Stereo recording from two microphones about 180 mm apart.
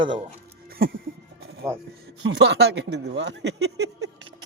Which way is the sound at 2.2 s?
75° right (ahead or behind).